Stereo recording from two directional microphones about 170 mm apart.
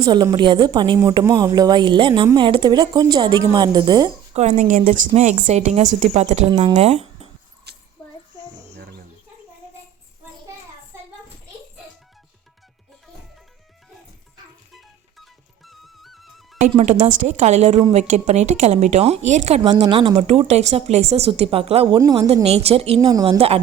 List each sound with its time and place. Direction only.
0.0 s a woman's voice: 25° right (ahead or behind)
4.4 s a woman's voice: 45° right (ahead or behind)
6.5 s a woman's voice: 25° right (ahead or behind)
6.7 s speech: 40° right (ahead or behind)
7.7 s a sound: 75° right (ahead or behind)
14.7 s music: centre (ahead or behind)
16.7 s a woman's voice: 40° right (ahead or behind)
19.8 s a woman's voice: 30° right (ahead or behind)
21.9 s a woman's voice: 20° right (ahead or behind)
22.4 s a woman's voice: 35° right (ahead or behind)
23.0 s a woman's voice: 25° right (ahead or behind)